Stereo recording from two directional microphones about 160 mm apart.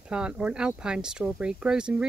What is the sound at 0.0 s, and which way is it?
Speech, 5° right (ahead or behind).